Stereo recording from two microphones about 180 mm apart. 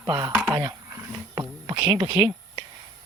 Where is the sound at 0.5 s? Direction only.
20° right (ahead or behind).